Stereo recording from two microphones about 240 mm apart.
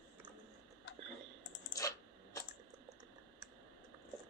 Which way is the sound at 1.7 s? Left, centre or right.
Centre.